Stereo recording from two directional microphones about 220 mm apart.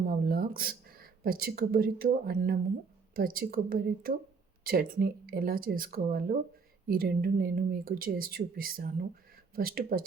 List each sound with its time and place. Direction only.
0.0 s speech: 45° right (ahead or behind)